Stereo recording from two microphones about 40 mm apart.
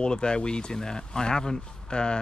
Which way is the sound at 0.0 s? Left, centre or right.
Left.